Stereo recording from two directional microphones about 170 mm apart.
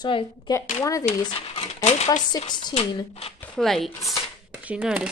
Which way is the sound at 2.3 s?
25° left (ahead or behind).